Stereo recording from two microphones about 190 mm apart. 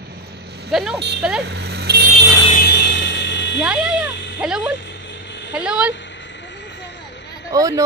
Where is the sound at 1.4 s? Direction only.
60° right (ahead or behind).